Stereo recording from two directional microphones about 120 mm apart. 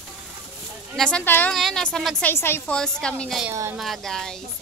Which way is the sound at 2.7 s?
5° left (ahead or behind).